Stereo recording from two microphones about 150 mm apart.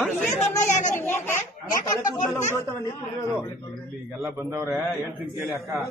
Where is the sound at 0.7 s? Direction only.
55° left (ahead or behind).